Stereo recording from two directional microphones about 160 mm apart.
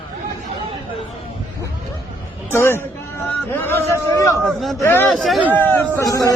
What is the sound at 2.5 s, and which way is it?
A man's voice, 15° left (ahead or behind).